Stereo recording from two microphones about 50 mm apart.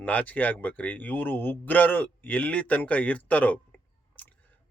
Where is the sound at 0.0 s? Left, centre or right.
Left.